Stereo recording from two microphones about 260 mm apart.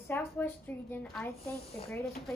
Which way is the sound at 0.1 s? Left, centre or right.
Centre.